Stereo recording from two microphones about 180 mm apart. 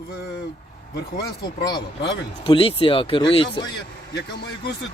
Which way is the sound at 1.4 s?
25° left (ahead or behind).